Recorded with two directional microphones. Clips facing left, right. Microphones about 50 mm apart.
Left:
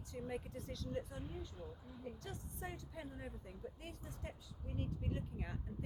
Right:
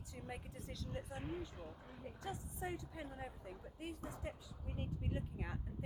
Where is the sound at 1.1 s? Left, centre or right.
Right.